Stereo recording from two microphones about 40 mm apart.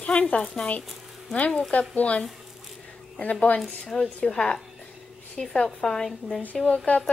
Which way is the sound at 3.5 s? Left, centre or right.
Left.